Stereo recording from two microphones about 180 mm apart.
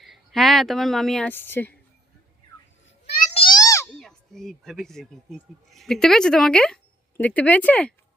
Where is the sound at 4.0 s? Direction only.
Centre (ahead or behind).